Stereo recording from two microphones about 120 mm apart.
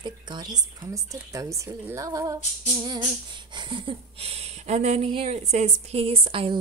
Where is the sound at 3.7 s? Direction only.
50° right (ahead or behind).